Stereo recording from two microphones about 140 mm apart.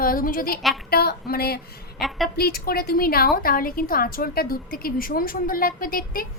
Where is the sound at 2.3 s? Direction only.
90° left.